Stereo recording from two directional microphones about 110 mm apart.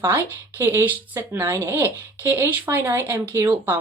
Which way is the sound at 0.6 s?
20° right (ahead or behind).